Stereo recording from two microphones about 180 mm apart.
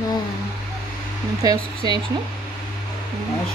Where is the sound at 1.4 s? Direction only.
25° right (ahead or behind).